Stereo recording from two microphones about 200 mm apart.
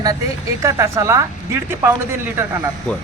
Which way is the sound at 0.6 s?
15° right (ahead or behind).